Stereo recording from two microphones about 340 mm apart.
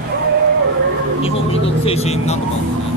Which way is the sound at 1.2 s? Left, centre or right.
Centre.